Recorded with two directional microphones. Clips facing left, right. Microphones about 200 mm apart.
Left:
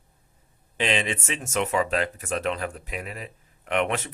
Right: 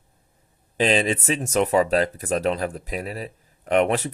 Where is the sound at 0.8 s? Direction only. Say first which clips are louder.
Right 6 dB; 35° right (ahead or behind).